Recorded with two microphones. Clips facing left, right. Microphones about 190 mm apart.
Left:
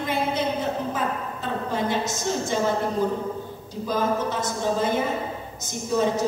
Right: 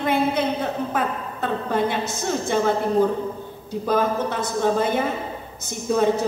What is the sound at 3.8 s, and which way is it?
A woman's voice, 60° right (ahead or behind).